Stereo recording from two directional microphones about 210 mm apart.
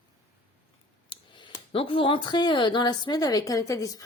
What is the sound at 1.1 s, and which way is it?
A woman's voice, 25° left (ahead or behind).